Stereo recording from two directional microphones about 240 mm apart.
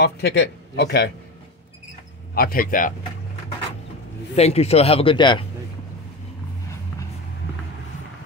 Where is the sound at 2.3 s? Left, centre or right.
Left.